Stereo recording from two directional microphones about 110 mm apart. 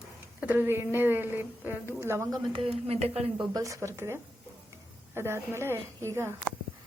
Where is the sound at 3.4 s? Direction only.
30° right (ahead or behind).